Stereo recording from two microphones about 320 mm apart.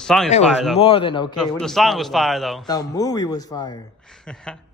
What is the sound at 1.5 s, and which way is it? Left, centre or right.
Speech, centre.